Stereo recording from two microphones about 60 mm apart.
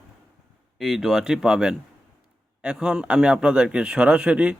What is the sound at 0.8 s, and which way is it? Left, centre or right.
A man's voice, centre.